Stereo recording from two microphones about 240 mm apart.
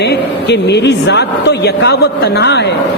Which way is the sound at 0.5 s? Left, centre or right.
Left.